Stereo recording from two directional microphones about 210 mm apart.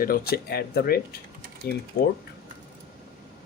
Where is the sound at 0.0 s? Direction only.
45° left (ahead or behind).